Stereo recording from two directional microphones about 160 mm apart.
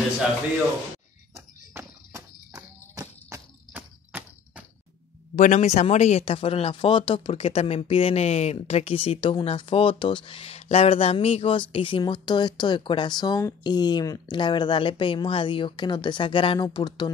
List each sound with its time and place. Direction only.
1.3 s walk: 15° right (ahead or behind)
5.3 s speech: 55° left (ahead or behind); by 17.1 s 30° left (ahead or behind)